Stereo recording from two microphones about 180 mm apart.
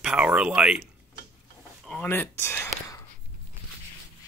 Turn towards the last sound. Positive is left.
turn(degrees=15)  # may be behind; listen again after turning